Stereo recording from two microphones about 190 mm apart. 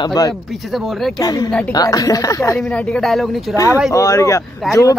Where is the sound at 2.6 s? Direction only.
5° left (ahead or behind).